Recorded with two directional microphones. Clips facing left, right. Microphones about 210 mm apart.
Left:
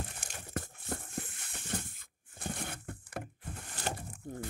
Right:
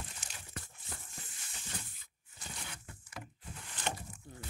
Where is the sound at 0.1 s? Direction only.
50° left (ahead or behind).